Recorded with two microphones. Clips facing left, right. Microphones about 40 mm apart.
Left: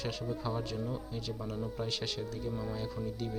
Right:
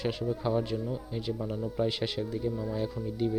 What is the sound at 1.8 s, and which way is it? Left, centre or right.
Speech, centre.